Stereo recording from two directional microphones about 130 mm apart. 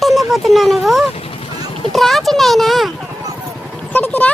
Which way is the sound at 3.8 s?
15° left (ahead or behind).